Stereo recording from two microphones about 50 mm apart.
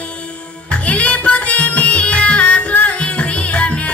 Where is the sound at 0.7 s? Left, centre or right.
Left.